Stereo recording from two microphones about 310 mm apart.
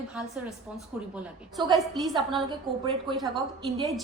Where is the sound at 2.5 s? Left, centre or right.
Centre.